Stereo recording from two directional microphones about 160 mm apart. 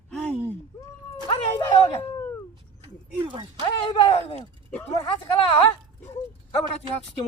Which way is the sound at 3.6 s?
30° left (ahead or behind).